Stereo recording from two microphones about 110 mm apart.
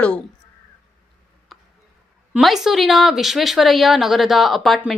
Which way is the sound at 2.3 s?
Centre (ahead or behind).